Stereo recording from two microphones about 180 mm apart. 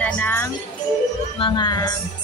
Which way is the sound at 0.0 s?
10° left (ahead or behind).